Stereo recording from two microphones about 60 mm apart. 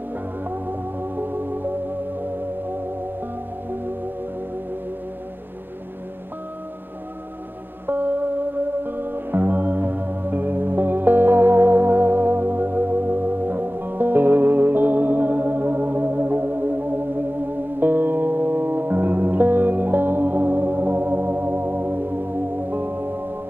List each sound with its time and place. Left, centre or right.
0.5 s music: right
7.8 s music: right